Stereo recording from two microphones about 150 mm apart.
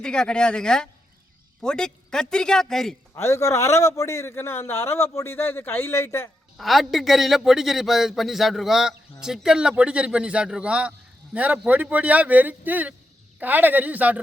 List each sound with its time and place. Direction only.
0.0 s a man's voice: 5° left (ahead or behind)
3.2 s a man's voice: 20° left (ahead or behind)
6.6 s a man's voice: centre (ahead or behind)